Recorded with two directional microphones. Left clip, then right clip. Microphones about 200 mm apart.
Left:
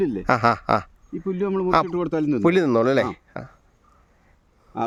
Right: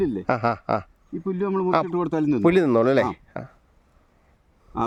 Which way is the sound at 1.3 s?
15° right (ahead or behind).